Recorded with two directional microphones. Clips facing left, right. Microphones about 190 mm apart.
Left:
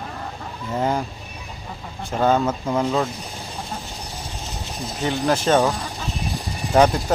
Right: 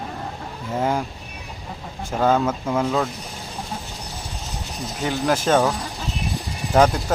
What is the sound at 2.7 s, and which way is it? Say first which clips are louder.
Speech: left 1 dB; 10° left (ahead or behind).